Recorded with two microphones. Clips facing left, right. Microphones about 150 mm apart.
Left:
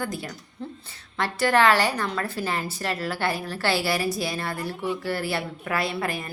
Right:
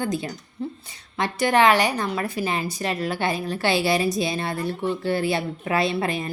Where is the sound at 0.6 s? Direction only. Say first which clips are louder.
Right 6 dB; 10° right (ahead or behind).